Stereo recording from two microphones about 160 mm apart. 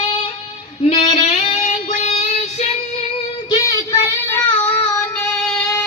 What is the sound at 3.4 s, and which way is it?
Child singing, 20° left (ahead or behind).